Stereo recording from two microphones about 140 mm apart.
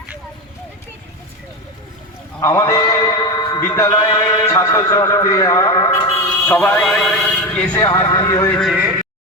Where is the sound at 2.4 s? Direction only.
20° left (ahead or behind).